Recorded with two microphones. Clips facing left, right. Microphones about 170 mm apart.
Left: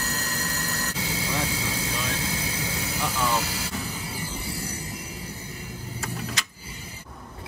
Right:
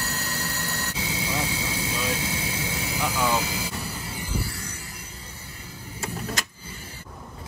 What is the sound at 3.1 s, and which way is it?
Vehicle, 15° right (ahead or behind).